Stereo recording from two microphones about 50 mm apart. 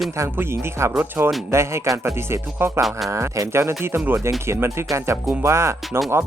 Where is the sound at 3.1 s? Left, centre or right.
Right.